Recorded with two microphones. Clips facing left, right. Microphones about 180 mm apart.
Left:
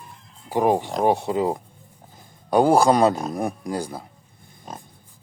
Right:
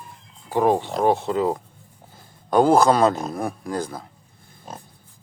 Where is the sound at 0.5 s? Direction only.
15° left (ahead or behind).